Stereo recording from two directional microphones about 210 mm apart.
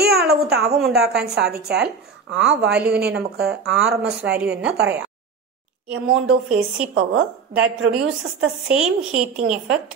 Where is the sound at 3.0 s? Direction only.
50° right (ahead or behind).